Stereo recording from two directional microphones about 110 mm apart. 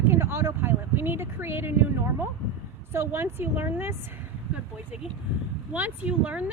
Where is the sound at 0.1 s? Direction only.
20° right (ahead or behind).